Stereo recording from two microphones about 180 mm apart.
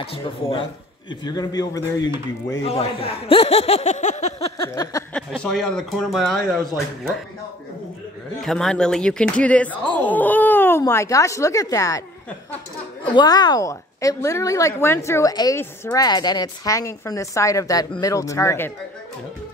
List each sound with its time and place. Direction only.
0.0 s a man's voice: 30° left (ahead or behind)
2.7 s speech: 35° left (ahead or behind)
5.1 s speech: 5° left (ahead or behind)
8.4 s speech: centre (ahead or behind); by 12.0 s 20° left (ahead or behind)
13.1 s a woman's voice: 20° left (ahead or behind)